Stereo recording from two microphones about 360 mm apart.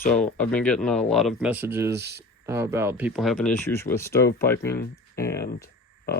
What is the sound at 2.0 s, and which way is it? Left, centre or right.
Speech, right.